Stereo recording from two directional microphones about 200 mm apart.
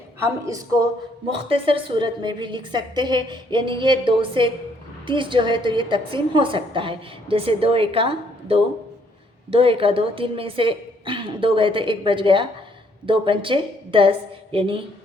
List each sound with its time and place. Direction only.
0.2 s a woman's voice: 15° right (ahead or behind)